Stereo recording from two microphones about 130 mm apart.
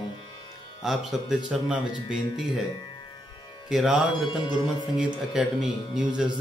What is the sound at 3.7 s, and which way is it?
Speech, 5° right (ahead or behind).